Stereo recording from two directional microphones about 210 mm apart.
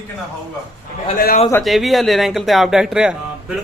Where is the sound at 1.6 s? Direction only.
Centre (ahead or behind).